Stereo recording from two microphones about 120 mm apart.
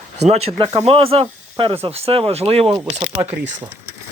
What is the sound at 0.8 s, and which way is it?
Speech, 55° right (ahead or behind).